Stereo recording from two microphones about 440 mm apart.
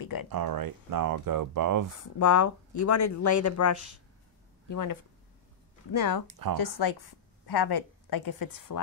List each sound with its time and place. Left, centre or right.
0.0 s a sound: left
0.3 s speech: right
2.0 s speech: left
5.9 s a woman's voice: left